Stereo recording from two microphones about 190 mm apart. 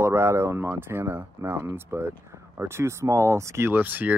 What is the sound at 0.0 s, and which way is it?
Speech, 15° right (ahead or behind).